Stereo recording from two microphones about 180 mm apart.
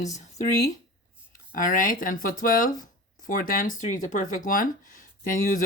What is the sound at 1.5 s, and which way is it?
Speech, 50° left (ahead or behind).